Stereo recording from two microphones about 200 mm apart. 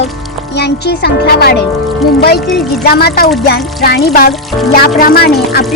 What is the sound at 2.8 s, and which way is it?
Speech, 50° left (ahead or behind).